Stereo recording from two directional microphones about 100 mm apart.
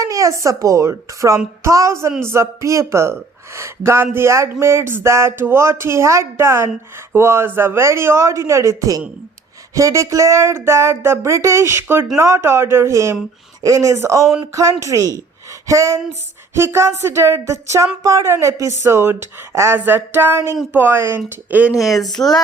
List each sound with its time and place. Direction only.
0.0 s speech: 35° right (ahead or behind); by 21.7 s 15° right (ahead or behind)
21.8 s speech: 40° left (ahead or behind)